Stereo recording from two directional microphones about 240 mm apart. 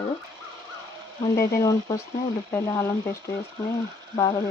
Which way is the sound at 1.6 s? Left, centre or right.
Centre.